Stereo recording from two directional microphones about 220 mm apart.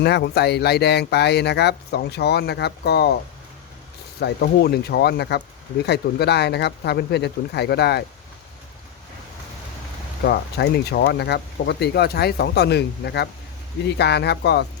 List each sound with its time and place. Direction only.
0.0 s speech: 50° left (ahead or behind)
4.2 s speech: 45° left (ahead or behind)
10.2 s speech: 45° left (ahead or behind)